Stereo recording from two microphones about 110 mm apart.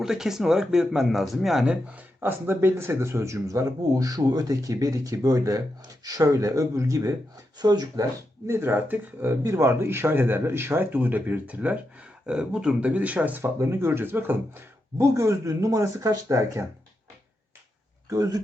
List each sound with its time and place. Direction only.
0.0 s speech: 5° right (ahead or behind); by 8.0 s 40° right (ahead or behind)
8.4 s speech: 20° right (ahead or behind)
18.1 s speech: 30° right (ahead or behind)